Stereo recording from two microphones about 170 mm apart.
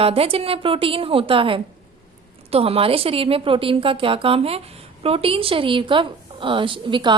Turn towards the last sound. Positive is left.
turn(degrees=-30)  # may be behind; listen again after turning